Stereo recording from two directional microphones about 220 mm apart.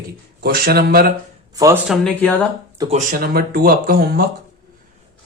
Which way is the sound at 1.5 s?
15° right (ahead or behind).